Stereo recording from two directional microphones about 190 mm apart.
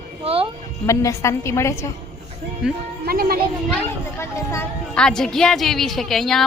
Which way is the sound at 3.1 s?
55° right (ahead or behind).